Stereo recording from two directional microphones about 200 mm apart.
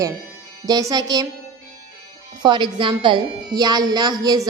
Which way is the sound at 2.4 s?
25° right (ahead or behind).